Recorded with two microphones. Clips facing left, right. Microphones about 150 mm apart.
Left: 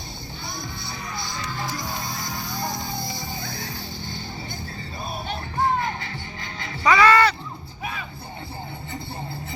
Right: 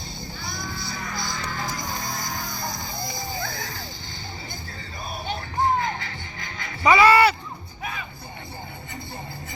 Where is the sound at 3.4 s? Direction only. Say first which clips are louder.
Right 1 dB; 55° right (ahead or behind).